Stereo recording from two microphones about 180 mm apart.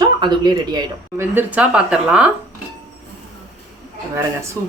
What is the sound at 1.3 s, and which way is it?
Speech, 10° right (ahead or behind).